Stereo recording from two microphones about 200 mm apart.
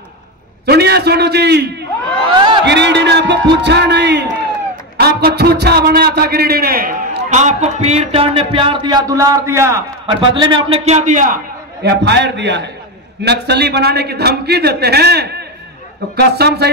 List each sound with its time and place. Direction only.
0.7 s a man's voice: 55° right (ahead or behind)
11.8 s a man's voice: 55° right (ahead or behind)